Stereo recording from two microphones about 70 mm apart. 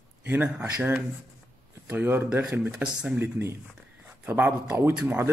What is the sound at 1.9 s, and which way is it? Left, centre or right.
Speech, right.